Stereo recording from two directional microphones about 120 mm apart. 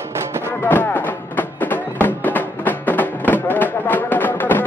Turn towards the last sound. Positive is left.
turn(degrees=15)  # may be behind; listen again after turning